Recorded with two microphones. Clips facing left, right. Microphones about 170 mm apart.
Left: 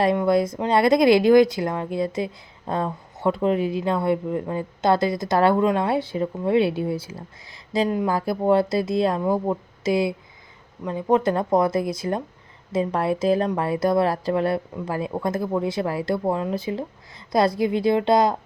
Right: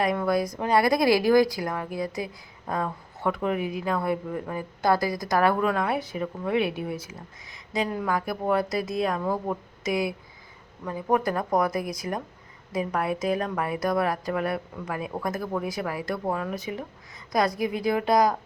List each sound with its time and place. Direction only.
0.2 s speech: 25° left (ahead or behind)